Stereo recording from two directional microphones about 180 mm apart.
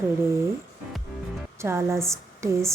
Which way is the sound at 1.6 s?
15° right (ahead or behind).